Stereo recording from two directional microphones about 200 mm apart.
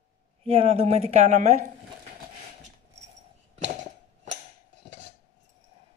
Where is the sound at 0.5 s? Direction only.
30° right (ahead or behind).